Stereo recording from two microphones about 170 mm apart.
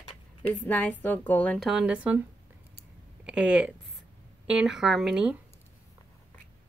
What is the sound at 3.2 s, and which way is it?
Speech, 5° right (ahead or behind).